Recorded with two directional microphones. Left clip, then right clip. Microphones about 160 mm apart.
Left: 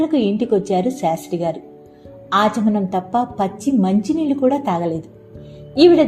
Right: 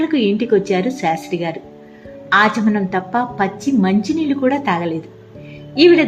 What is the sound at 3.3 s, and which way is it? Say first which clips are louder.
A woman's voice: right 1 dB; 35° left (ahead or behind).